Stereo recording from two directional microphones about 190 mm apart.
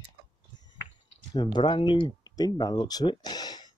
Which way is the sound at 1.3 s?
25° left (ahead or behind).